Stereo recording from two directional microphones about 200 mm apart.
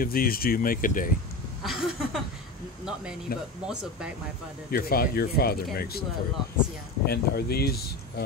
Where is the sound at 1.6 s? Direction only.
Centre (ahead or behind).